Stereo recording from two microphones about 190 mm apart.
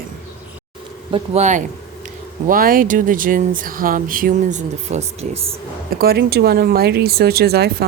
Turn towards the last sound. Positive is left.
turn(degrees=-55)  # may be behind; listen again after turning